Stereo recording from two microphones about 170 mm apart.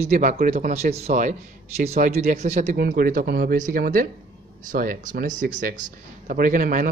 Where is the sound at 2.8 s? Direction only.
60° right (ahead or behind).